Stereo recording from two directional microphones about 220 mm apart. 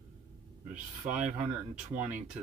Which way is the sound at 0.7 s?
5° right (ahead or behind).